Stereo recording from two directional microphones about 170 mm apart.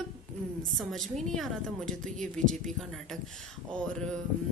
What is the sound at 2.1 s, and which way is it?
Speech, 45° right (ahead or behind).